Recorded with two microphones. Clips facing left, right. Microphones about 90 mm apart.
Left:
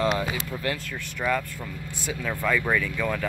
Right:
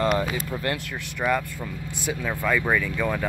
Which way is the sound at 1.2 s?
20° right (ahead or behind).